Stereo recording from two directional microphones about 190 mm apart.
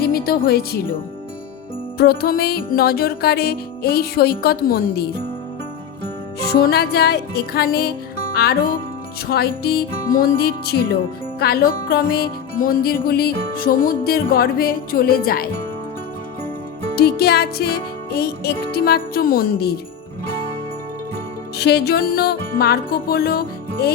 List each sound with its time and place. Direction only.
0.0 s speech: 50° left (ahead or behind)
2.0 s music: 55° left (ahead or behind)
6.5 s music: 55° left (ahead or behind)
17.0 s music: 55° left (ahead or behind)
21.6 s music: 60° left (ahead or behind)